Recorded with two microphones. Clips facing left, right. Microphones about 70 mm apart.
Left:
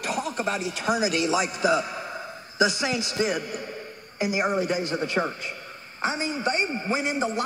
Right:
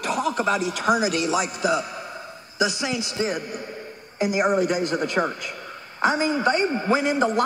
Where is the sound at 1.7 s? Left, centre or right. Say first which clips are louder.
Even; centre.